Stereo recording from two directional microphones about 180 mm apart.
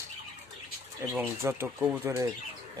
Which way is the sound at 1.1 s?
10° right (ahead or behind).